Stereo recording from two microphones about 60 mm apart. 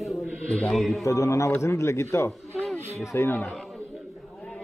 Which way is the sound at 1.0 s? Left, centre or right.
Left.